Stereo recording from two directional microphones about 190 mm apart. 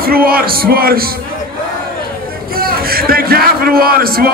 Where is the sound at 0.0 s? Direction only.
50° right (ahead or behind).